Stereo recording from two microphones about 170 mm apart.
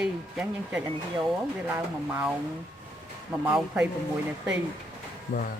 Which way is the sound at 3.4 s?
5° right (ahead or behind).